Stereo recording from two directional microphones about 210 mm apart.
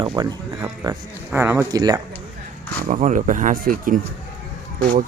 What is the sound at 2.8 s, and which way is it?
Speech, 35° right (ahead or behind).